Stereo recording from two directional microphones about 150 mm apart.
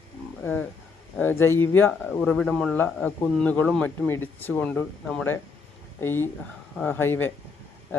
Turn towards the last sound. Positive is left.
turn(degrees=15)  # may be behind; listen again after turning